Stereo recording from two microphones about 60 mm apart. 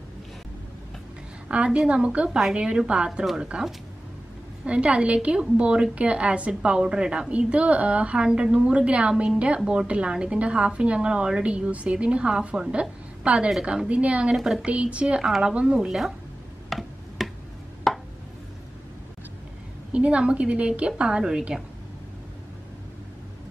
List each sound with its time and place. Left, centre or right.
1.5 s a woman's voice: centre
14.3 s a woman's voice: centre
14.7 s a woman's voice: centre
15.2 s a woman's voice: centre
16.6 s tick-tock: centre
17.9 s a sound: centre
19.9 s a woman's voice: centre